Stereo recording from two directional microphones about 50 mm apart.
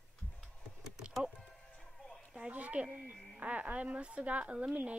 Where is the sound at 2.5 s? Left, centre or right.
Right.